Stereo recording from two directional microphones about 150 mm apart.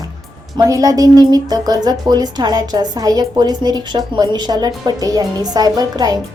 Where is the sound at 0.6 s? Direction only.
20° right (ahead or behind).